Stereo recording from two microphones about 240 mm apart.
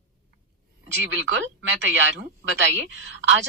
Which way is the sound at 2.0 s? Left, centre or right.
Right.